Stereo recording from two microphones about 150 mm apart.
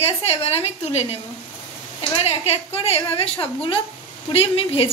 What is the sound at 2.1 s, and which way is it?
A woman's voice, 40° left (ahead or behind).